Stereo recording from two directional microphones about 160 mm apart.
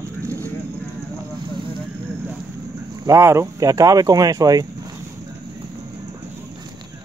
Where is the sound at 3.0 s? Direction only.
20° right (ahead or behind).